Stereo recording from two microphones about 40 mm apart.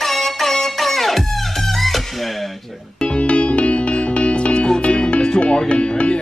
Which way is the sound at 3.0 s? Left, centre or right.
Left.